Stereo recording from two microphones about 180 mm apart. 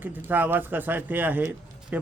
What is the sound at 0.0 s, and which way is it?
Speech, 10° right (ahead or behind).